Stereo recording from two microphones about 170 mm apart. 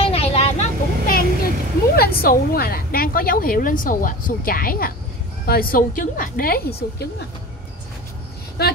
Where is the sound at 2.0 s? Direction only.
60° left (ahead or behind).